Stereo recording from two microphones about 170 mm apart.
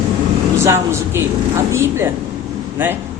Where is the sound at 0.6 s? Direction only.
15° right (ahead or behind).